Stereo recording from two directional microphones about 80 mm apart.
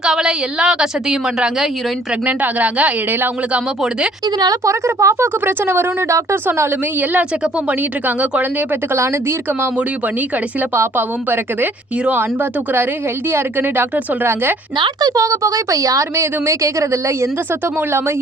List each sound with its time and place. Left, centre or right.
0.0 s a woman's voice: centre
4.6 s speech: right
5.5 s a woman's voice: right
7.7 s a woman's voice: centre
10.8 s a woman's voice: right
15.0 s speech: right